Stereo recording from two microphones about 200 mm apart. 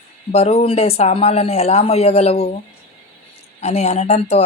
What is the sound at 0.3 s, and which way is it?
Speech, 30° left (ahead or behind).